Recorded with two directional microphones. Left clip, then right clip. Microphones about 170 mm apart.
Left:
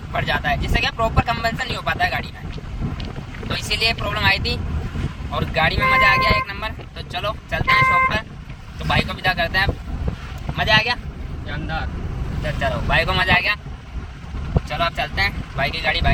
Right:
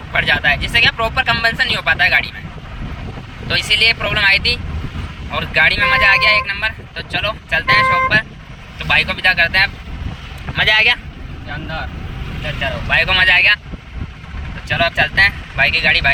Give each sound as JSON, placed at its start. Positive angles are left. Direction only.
{"t": 0.1, "sound": "speech", "side_deg": 10}
{"t": 3.5, "sound": "speech", "side_deg": 10}
{"t": 10.6, "sound": "speech", "side_deg": 0}
{"t": 12.5, "sound": "speech", "side_deg": 25}
{"t": 14.7, "sound": "speech", "side_deg": 10}